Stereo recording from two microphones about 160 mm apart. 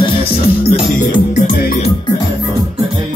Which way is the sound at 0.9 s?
55° left (ahead or behind).